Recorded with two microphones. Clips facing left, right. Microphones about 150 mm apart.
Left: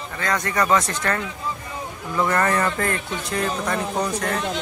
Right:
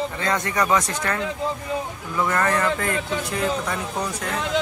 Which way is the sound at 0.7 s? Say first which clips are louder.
Left 1 dB; 10° right (ahead or behind).